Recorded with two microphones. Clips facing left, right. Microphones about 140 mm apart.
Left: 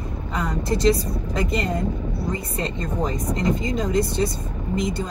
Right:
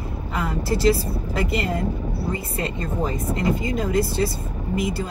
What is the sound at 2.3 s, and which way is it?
Speech, 30° right (ahead or behind).